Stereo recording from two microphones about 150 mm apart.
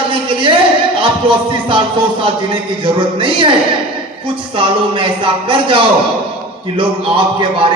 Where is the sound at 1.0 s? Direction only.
35° right (ahead or behind).